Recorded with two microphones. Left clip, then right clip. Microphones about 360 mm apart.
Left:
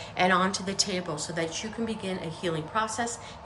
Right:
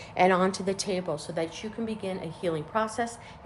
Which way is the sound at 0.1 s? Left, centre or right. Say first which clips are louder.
Right 1 dB; centre.